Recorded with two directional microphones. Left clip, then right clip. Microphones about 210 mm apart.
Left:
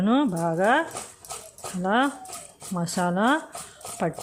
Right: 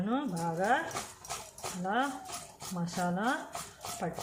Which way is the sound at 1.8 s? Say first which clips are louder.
Left 9 dB; 55° left (ahead or behind).